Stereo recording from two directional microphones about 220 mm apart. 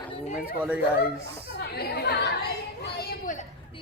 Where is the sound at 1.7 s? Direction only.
45° left (ahead or behind).